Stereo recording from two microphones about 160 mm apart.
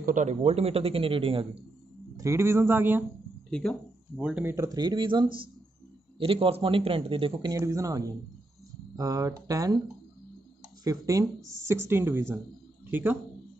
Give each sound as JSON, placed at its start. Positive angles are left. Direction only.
{"t": 0.0, "sound": "a man's voice", "side_deg": -50}
{"t": 2.1, "sound": "speech", "side_deg": -15}
{"t": 3.4, "sound": "speech", "side_deg": 5}
{"t": 4.2, "sound": "speech", "side_deg": -10}
{"t": 4.6, "sound": "a man's voice", "side_deg": -25}
{"t": 7.5, "sound": "speech", "side_deg": -20}
{"t": 10.8, "sound": "speech", "side_deg": -20}